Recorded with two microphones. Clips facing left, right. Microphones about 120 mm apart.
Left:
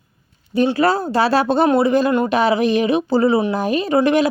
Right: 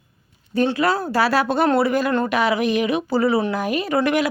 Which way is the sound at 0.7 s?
30° left (ahead or behind).